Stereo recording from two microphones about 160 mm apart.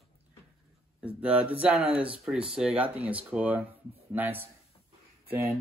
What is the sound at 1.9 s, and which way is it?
Speech, 35° right (ahead or behind).